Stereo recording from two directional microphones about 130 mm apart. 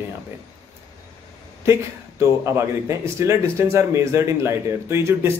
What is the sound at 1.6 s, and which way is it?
Speech, 20° right (ahead or behind).